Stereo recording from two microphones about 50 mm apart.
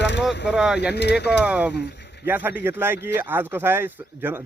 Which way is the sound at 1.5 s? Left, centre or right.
Right.